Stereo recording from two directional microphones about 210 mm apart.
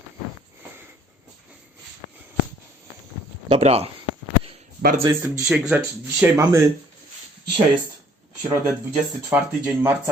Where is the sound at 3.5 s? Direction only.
30° right (ahead or behind).